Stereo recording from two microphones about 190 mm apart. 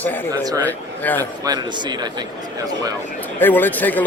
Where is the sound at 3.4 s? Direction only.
10° left (ahead or behind).